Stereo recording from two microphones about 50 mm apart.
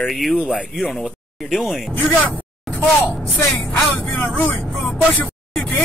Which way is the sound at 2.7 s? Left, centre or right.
Centre.